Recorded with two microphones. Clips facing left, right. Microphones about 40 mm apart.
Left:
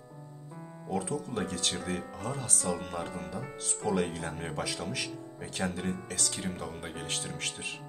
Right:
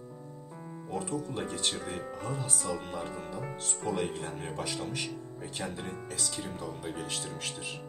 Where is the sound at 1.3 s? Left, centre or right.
Left.